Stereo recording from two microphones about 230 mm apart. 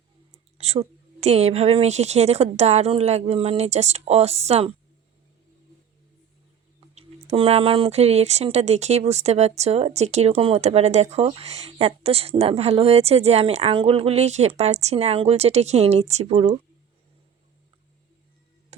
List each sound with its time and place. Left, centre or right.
0.6 s speech: right
6.7 s speech: right
18.7 s a sound: right